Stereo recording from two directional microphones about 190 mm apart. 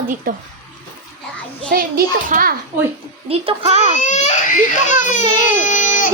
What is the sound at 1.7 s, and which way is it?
Female singing, 50° right (ahead or behind).